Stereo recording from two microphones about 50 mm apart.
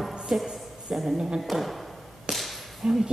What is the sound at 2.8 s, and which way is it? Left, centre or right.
Speech, centre.